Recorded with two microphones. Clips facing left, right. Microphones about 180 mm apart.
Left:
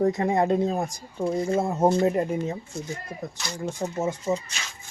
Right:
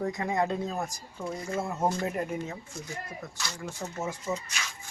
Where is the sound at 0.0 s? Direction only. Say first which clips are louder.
Left 7 dB; 35° left (ahead or behind); by 4.0 s 20° left (ahead or behind).